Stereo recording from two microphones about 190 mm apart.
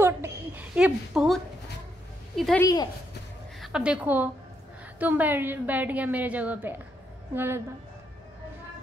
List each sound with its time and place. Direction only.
0.0 s a sound: 10° right (ahead or behind)
2.3 s a woman's voice: centre (ahead or behind)
2.6 s speech: 20° left (ahead or behind)
3.6 s a woman's voice: 5° right (ahead or behind)